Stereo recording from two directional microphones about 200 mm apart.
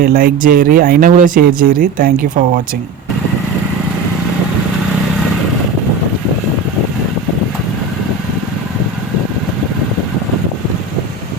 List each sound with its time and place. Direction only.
0.0 s speech: 45° right (ahead or behind)